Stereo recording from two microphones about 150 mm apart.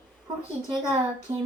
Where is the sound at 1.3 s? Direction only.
30° right (ahead or behind).